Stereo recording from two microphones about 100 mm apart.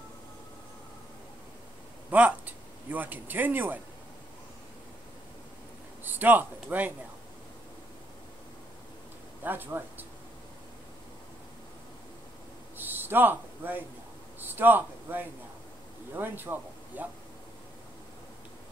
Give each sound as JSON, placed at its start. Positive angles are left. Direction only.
{"t": 2.0, "sound": "speech", "side_deg": -15}
{"t": 6.0, "sound": "a man's voice", "side_deg": -20}
{"t": 9.4, "sound": "a man's voice", "side_deg": -20}
{"t": 12.7, "sound": "a sound", "side_deg": -20}
{"t": 14.4, "sound": "a man's voice", "side_deg": -20}